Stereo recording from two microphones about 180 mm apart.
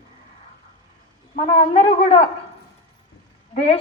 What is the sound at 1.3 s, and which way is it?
Speech, 35° left (ahead or behind).